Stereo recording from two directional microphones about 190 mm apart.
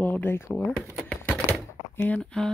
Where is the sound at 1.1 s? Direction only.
5° left (ahead or behind).